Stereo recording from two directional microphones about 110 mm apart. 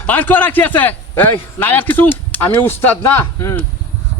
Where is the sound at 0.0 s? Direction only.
15° left (ahead or behind).